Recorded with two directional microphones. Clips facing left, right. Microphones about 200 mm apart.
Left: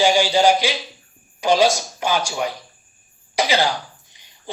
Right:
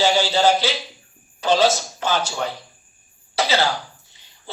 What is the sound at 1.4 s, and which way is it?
Speech, 15° left (ahead or behind).